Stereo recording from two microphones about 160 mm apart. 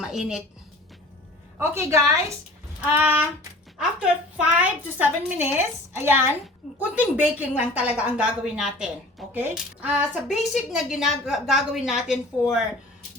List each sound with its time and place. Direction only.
0.0 s a woman's voice: 5° right (ahead or behind)
1.5 s a woman's voice: 15° right (ahead or behind)
4.4 s a woman's voice: 10° right (ahead or behind)